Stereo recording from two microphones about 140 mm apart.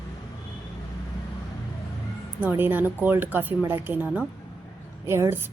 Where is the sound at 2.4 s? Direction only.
15° right (ahead or behind).